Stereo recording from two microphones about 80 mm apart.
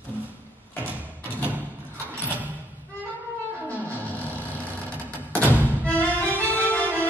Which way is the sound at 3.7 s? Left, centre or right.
Left.